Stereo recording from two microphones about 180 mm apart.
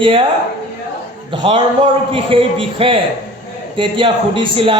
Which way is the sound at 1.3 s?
25° right (ahead or behind).